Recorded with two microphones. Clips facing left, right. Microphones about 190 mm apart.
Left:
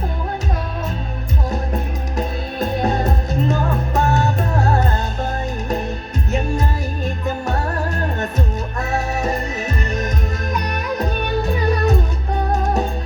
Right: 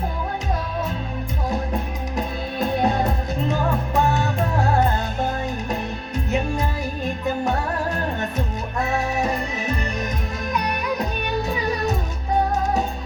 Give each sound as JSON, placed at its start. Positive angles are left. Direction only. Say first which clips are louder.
{"t": 2.1, "sound": "music", "louder": "left 2 dB", "side_deg": 45}
{"t": 8.8, "sound": "music", "louder": "even", "side_deg": 45}
{"t": 11.4, "sound": "music", "louder": "left 6 dB", "side_deg": 60}